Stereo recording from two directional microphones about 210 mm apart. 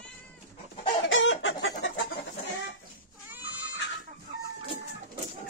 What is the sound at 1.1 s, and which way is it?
Chicken, 65° left (ahead or behind).